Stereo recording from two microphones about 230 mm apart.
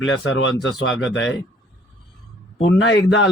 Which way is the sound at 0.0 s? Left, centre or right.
Left.